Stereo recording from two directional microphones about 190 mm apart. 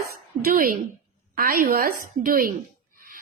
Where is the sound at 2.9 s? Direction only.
50° right (ahead or behind).